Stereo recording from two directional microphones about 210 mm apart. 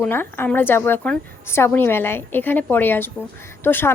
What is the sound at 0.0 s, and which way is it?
A woman's voice, 10° left (ahead or behind).